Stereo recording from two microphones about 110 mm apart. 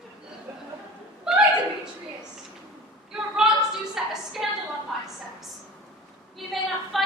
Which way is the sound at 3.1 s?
5° right (ahead or behind).